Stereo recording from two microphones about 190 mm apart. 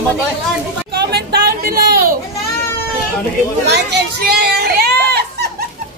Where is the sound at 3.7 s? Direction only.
65° right (ahead or behind).